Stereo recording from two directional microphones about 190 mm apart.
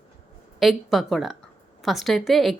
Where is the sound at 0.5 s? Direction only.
Centre (ahead or behind).